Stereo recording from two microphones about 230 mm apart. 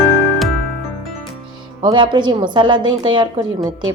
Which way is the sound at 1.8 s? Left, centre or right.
Centre.